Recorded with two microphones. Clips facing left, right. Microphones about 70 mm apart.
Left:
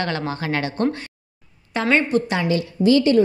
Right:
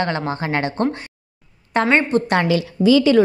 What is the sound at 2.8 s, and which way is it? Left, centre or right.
Speech, right.